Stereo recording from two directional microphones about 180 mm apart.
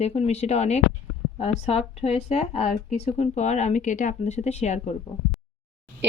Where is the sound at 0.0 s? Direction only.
35° left (ahead or behind).